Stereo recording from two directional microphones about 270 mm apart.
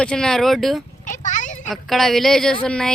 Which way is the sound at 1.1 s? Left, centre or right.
Left.